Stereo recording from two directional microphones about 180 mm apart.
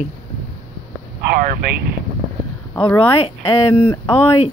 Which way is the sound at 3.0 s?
30° left (ahead or behind).